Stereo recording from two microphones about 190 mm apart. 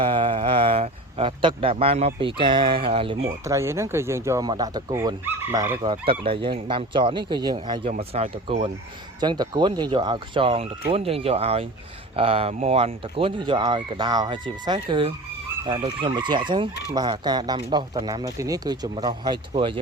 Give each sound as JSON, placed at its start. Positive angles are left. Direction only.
{"t": 0.0, "sound": "speech", "side_deg": -25}
{"t": 3.4, "sound": "speech", "side_deg": -15}
{"t": 9.2, "sound": "speech", "side_deg": -25}